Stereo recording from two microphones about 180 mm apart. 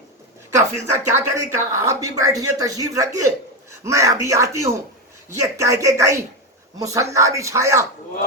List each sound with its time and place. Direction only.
0.5 s a man's voice: 15° right (ahead or behind)